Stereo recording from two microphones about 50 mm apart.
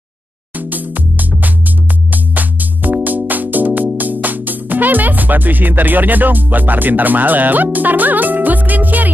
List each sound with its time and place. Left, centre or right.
0.6 s music: right
2.3 s music: right